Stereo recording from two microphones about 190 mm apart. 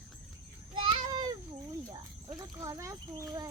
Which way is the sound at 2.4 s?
15° right (ahead or behind).